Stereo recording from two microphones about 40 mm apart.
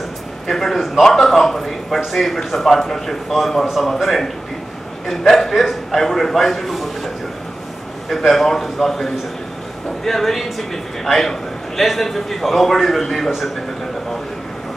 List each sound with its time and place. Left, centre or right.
0.5 s a man's voice: centre
8.1 s a man's voice: centre